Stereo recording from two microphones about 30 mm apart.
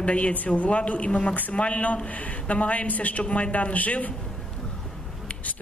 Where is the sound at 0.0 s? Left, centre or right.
Left.